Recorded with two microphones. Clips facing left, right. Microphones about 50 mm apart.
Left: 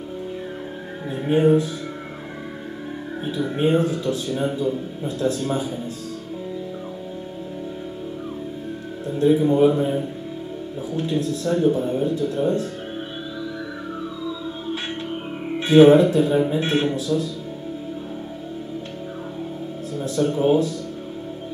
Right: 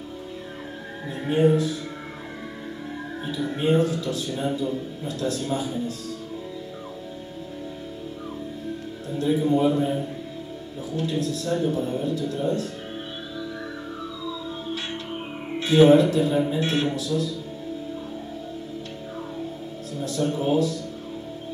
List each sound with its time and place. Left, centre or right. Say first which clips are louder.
1.2 s speech: left 3 dB; centre
3.3 s speech: left 2 dB; left
9.2 s speech: left 5 dB; left
15.6 s speech: left 4 dB; left
20.0 s speech: left 5 dB; left